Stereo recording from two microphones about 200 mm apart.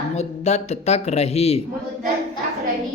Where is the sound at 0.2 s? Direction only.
35° left (ahead or behind).